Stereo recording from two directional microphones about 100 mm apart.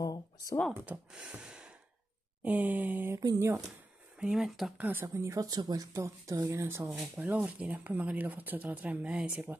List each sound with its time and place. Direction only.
0.0 s computer keyboard: 40° left (ahead or behind)
1.1 s gasp: 10° right (ahead or behind)
2.4 s speech: 15° right (ahead or behind)
3.3 s speech: 30° right (ahead or behind)
4.2 s speech: 5° right (ahead or behind)
4.7 s speech: 15° right (ahead or behind)
5.0 s speech: 30° right (ahead or behind); by 9.6 s 15° right (ahead or behind)